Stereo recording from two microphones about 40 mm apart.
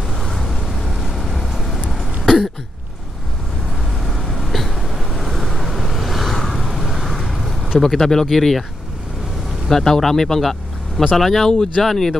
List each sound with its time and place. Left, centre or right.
0.2 s vehicle: centre
2.2 s cough: centre
4.0 s vehicle: centre
7.8 s speech: centre
9.7 s speech: centre
11.5 s speech: centre
11.8 s speech: centre